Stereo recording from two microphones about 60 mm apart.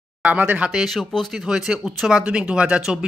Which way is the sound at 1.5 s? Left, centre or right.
Centre.